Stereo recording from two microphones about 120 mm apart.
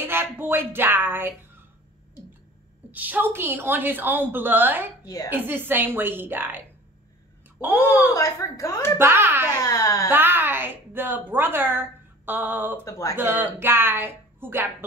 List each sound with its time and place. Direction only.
0.0 s speech: 20° right (ahead or behind)
2.9 s a woman's voice: 15° right (ahead or behind)
5.0 s a woman's voice: 30° left (ahead or behind)
5.3 s a woman's voice: 15° right (ahead or behind)
7.6 s a woman's voice: 15° right (ahead or behind)
8.1 s a woman's voice: 25° left (ahead or behind)
8.9 s a child's voice: 20° right (ahead or behind)
9.6 s a woman's voice: 30° left (ahead or behind)
10.1 s a woman's voice: 15° right (ahead or behind)
12.8 s a woman's voice: 25° left (ahead or behind)
13.1 s a woman's voice: 15° right (ahead or behind)